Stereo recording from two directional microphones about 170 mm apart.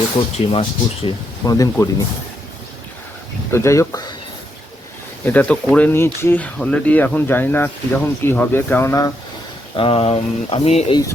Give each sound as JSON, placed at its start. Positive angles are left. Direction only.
{"t": 0.2, "sound": "speech", "side_deg": 35}
{"t": 1.0, "sound": "speech", "side_deg": 20}
{"t": 3.5, "sound": "speech", "side_deg": 15}
{"t": 5.2, "sound": "speech", "side_deg": 10}
{"t": 9.7, "sound": "speech", "side_deg": 35}